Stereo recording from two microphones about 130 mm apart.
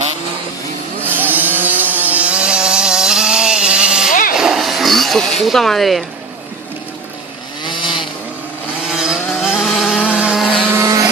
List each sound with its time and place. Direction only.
1.0 s a sound: 15° right (ahead or behind)
4.1 s vehicle: 90° left
4.4 s a sound: 5° right (ahead or behind)
7.6 s chainsaw: 35° left (ahead or behind)
8.9 s vehicle: 5° right (ahead or behind)
10.8 s vehicle: 25° right (ahead or behind)